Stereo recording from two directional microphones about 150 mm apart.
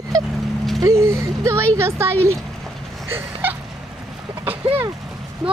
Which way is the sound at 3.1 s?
15° right (ahead or behind).